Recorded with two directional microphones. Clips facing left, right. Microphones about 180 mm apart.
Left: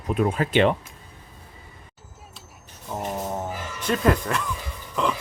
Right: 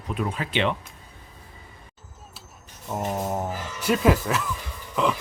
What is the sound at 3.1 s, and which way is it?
Music, 10° right (ahead or behind).